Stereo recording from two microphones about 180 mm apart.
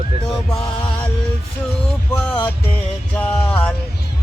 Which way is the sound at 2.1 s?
5° left (ahead or behind).